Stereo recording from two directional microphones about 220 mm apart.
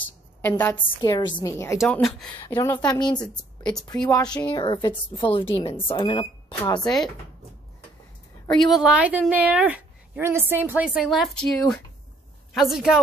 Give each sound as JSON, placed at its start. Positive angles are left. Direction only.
{"t": 0.4, "sound": "a woman's voice", "side_deg": 10}
{"t": 1.8, "sound": "a woman's voice", "side_deg": 0}
{"t": 2.3, "sound": "a woman's voice", "side_deg": 20}
{"t": 2.7, "sound": "a woman's voice", "side_deg": 10}
{"t": 3.0, "sound": "a woman's voice", "side_deg": 20}
{"t": 6.8, "sound": "a woman's voice", "side_deg": 0}
{"t": 8.5, "sound": "a woman's voice", "side_deg": 0}